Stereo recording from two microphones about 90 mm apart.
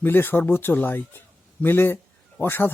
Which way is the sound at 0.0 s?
25° left (ahead or behind).